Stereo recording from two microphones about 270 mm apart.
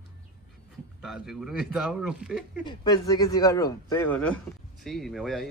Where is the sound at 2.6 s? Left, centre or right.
Centre.